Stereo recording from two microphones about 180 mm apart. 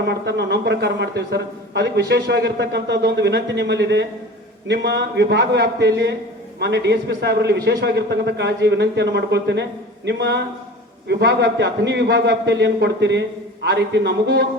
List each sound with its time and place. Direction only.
0.1 s a man's voice: 70° right (ahead or behind)